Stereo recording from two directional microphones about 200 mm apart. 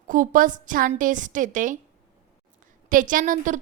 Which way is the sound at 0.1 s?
40° right (ahead or behind).